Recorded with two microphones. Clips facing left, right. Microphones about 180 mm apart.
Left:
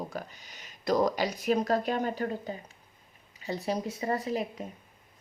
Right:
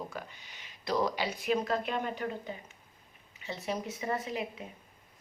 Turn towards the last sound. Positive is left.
turn(degrees=40)  # may be behind; listen again after turning